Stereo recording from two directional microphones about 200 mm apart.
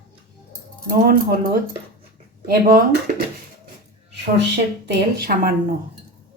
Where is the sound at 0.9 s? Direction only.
45° right (ahead or behind).